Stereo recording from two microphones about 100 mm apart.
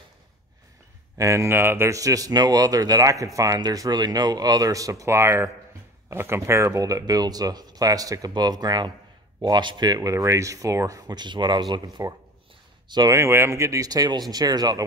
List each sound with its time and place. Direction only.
1.1 s speech: 30° right (ahead or behind); by 13.1 s 45° right (ahead or behind)
13.1 s speech: 25° right (ahead or behind)